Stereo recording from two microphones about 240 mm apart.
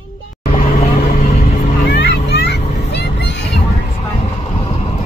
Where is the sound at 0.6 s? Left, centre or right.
Left.